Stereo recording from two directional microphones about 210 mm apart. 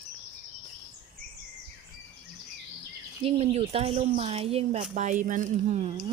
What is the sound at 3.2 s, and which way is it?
Speech, 30° right (ahead or behind).